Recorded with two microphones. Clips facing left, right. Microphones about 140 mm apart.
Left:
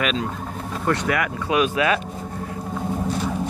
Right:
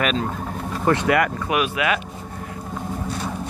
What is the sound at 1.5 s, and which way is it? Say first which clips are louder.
Speech: left 6 dB; 30° left (ahead or behind).